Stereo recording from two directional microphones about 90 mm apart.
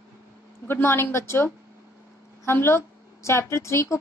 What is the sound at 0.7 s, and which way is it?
A woman's voice, 25° left (ahead or behind).